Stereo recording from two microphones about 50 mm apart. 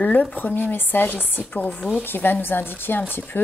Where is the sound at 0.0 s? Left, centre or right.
Left.